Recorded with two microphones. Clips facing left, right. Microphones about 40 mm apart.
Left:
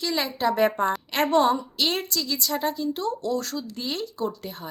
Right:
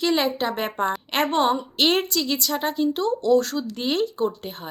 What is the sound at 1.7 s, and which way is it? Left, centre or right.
A woman's voice, right.